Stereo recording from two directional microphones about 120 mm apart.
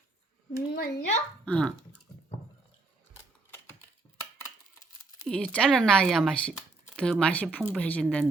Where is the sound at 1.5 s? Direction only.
5° left (ahead or behind).